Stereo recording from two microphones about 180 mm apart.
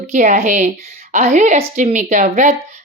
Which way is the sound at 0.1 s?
40° right (ahead or behind).